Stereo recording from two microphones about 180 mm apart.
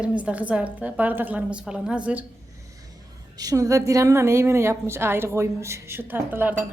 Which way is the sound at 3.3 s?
20° right (ahead or behind).